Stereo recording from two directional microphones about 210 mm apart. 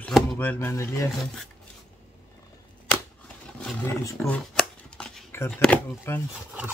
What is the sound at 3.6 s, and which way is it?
Roaring cats, 10° left (ahead or behind).